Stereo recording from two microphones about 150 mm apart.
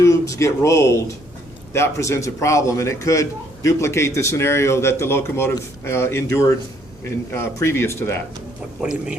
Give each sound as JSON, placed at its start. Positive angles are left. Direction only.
{"t": 0.0, "sound": "a man's voice", "side_deg": 20}
{"t": 7.3, "sound": "speech", "side_deg": 15}
{"t": 8.8, "sound": "speech", "side_deg": -5}